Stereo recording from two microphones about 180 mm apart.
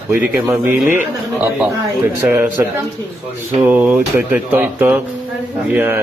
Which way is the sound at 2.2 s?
10° right (ahead or behind).